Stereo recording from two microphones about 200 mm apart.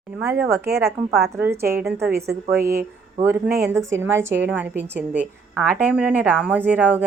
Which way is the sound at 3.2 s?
10° right (ahead or behind).